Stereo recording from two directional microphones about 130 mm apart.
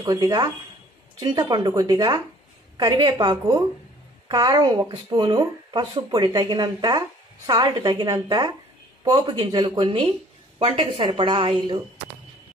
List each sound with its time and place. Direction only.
0.0 s speech: 30° right (ahead or behind)